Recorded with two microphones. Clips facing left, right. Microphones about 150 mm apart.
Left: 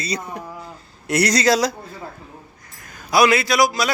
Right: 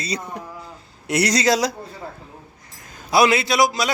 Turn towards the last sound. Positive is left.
turn(degrees=-20)  # may be behind; listen again after turning